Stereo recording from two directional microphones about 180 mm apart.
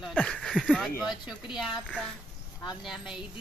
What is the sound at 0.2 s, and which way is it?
Bird, 5° left (ahead or behind).